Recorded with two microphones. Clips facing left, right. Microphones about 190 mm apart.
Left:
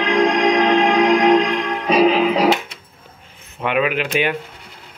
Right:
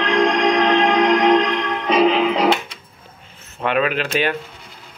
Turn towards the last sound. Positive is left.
turn(degrees=15)  # may be behind; listen again after turning